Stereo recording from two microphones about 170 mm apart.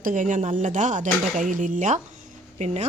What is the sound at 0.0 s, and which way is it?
Speech, 50° right (ahead or behind).